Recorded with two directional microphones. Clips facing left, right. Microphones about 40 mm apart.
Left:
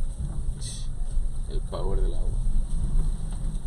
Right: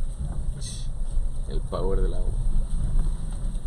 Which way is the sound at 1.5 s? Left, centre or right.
Centre.